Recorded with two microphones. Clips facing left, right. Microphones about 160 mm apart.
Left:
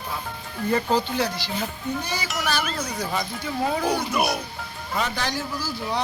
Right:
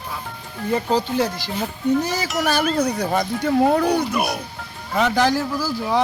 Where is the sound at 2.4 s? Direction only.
50° right (ahead or behind).